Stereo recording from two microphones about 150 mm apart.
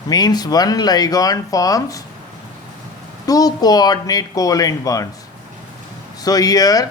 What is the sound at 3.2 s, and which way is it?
Speech, 25° left (ahead or behind).